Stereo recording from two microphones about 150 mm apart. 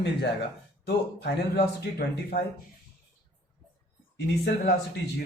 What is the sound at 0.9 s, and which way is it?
Speech, 90° left.